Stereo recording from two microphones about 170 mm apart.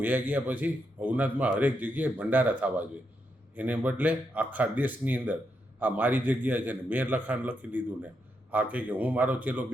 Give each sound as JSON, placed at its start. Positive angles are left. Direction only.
{"t": 0.0, "sound": "a man's voice", "side_deg": -10}